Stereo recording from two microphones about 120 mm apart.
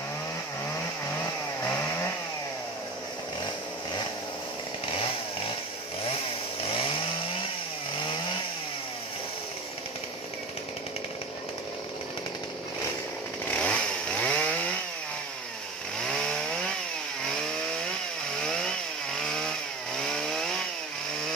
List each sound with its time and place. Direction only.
1.6 s chainsaw: 20° left (ahead or behind)
6.6 s chainsaw: 50° left (ahead or behind)
13.5 s chainsaw: 10° left (ahead or behind)
16.1 s chainsaw: 5° left (ahead or behind)
19.1 s chainsaw: 5° left (ahead or behind)